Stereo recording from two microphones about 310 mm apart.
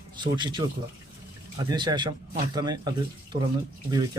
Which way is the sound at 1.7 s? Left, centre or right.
Centre.